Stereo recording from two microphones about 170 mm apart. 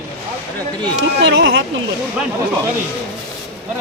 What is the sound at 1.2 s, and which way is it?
Speech, 90° right.